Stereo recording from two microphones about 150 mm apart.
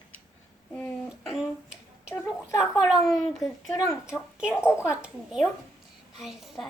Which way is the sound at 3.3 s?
Centre (ahead or behind).